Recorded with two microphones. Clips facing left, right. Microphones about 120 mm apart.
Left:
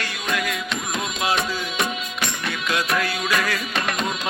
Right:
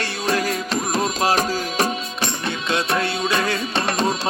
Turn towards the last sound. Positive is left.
turn(degrees=-30)  # may be behind; listen again after turning